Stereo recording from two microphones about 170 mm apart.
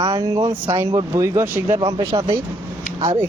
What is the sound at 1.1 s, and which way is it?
Speech, 15° right (ahead or behind).